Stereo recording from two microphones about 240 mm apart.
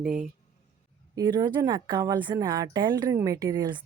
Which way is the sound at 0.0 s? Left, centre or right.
Centre.